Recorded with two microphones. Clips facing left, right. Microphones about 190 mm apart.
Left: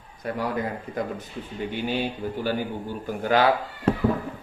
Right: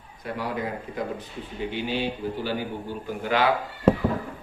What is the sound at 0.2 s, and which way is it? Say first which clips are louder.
Speech: left 3 dB; 45° left (ahead or behind).